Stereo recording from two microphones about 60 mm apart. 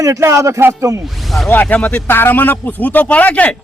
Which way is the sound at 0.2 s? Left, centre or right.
Right.